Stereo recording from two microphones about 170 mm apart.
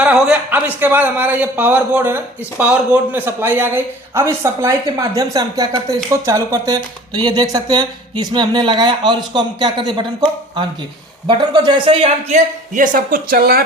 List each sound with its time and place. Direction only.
0.0 s a man's voice: 5° right (ahead or behind); by 13.7 s 60° right (ahead or behind)